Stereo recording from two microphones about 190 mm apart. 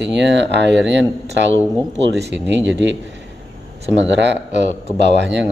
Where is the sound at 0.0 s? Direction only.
65° right (ahead or behind).